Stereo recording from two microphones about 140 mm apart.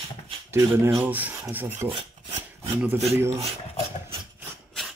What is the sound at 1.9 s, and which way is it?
Filing, 40° right (ahead or behind).